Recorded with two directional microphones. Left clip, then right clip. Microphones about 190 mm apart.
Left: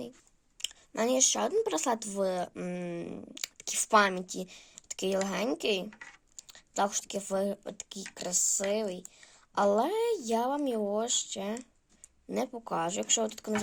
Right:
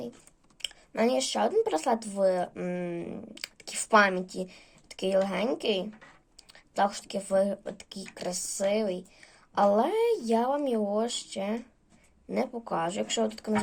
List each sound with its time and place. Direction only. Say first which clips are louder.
0.6 s speech: right 4 dB; 40° left (ahead or behind)